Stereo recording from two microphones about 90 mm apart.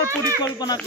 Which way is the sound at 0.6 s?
50° left (ahead or behind).